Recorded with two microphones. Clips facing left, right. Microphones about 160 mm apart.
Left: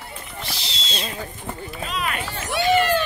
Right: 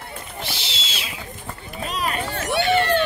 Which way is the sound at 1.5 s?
20° left (ahead or behind).